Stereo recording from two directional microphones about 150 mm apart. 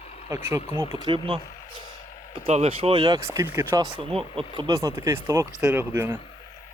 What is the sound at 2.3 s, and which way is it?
Speech, 45° right (ahead or behind).